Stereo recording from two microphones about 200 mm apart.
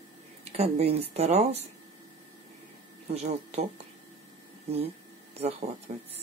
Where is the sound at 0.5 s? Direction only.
30° right (ahead or behind).